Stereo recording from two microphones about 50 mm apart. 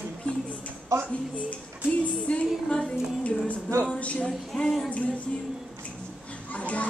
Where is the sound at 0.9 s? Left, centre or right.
Right.